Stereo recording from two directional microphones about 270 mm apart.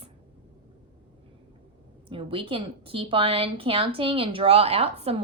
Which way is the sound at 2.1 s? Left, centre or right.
Centre.